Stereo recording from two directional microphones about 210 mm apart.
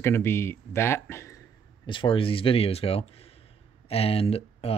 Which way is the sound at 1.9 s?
25° left (ahead or behind).